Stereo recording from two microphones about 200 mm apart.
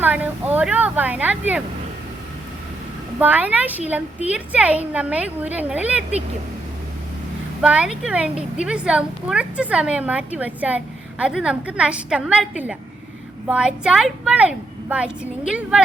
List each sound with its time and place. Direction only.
0.0 s a woman's voice: 10° right (ahead or behind)
3.2 s a woman's voice: 10° right (ahead or behind)
7.6 s a woman's voice: 5° right (ahead or behind)